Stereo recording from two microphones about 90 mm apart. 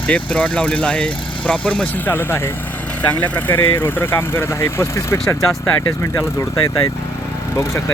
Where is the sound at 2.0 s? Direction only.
25° left (ahead or behind).